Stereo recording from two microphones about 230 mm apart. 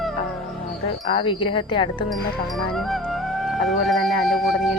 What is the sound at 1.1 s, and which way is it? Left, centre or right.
Speech, left.